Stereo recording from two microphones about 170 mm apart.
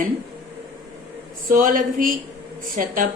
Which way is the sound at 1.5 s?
50° right (ahead or behind).